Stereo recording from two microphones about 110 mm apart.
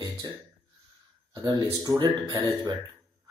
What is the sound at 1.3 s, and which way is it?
Speech, 35° right (ahead or behind).